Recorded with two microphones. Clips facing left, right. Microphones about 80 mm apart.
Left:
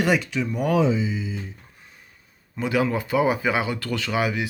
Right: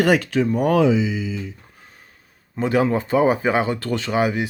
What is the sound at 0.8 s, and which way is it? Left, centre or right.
Speech, right.